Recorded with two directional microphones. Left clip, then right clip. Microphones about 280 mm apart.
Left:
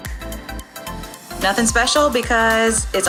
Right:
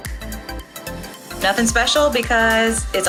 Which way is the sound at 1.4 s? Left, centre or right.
Left.